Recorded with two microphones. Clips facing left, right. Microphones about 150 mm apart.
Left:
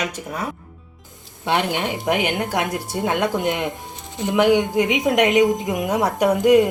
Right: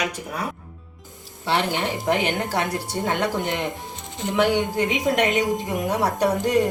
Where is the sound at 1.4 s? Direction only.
15° left (ahead or behind).